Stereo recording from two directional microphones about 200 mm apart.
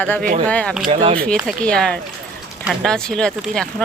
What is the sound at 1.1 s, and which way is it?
Speech, centre (ahead or behind).